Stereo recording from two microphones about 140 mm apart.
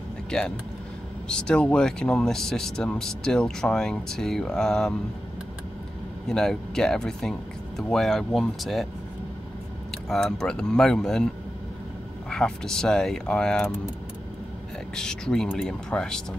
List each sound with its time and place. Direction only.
1.3 s speech: 5° left (ahead or behind)
6.2 s speech: 5° left (ahead or behind)
9.8 s speech: 5° left (ahead or behind)
12.3 s speech: 5° left (ahead or behind)
15.0 s speech: 5° left (ahead or behind)